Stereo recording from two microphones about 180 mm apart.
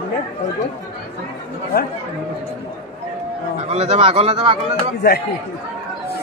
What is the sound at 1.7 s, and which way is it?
Speech, 55° left (ahead or behind).